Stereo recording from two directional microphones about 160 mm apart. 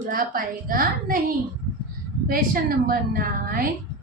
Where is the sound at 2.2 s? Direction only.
65° right (ahead or behind).